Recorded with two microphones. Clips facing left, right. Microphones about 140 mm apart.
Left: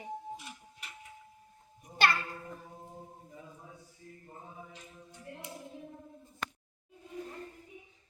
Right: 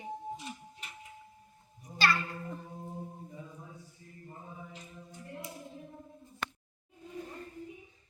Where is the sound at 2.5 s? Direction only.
Centre (ahead or behind).